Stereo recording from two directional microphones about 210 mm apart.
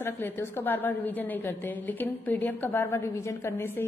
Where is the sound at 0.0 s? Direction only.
10° left (ahead or behind).